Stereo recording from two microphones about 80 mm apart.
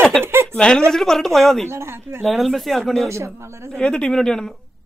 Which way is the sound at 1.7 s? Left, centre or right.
Right.